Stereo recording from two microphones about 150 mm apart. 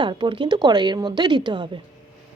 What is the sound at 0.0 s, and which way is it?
A woman's voice, 35° right (ahead or behind).